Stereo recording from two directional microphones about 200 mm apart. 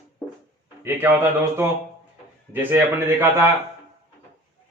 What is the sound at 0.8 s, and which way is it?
Speech, 10° right (ahead or behind).